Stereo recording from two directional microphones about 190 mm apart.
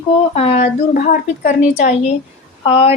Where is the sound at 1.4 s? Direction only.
40° left (ahead or behind).